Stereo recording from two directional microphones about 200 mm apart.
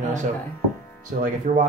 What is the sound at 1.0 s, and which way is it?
Speech, 40° right (ahead or behind).